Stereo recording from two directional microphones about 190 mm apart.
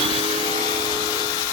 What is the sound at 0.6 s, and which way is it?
Vacuum cleaner, 20° left (ahead or behind).